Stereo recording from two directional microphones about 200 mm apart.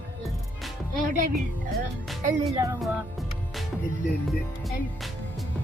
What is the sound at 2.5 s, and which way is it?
Music, 15° right (ahead or behind).